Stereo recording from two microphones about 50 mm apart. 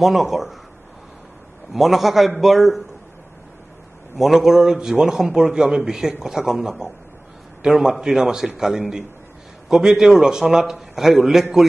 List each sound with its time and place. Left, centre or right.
0.0 s a man's voice: centre
1.7 s a man's voice: centre
4.2 s a man's voice: centre